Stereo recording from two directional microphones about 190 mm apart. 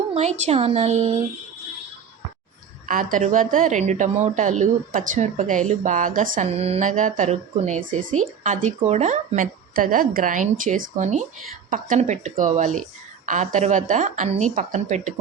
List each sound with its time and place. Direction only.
0.1 s a woman's voice: 35° right (ahead or behind)
2.8 s a woman's voice: 45° right (ahead or behind)